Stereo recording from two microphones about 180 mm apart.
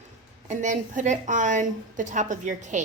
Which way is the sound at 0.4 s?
45° right (ahead or behind).